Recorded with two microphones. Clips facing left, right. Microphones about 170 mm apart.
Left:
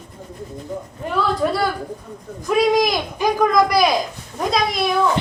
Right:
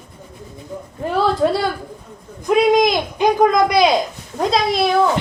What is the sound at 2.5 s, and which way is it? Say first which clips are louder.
Speech: right 3 dB; 20° right (ahead or behind).